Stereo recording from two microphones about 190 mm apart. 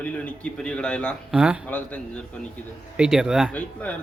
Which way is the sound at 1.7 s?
10° left (ahead or behind).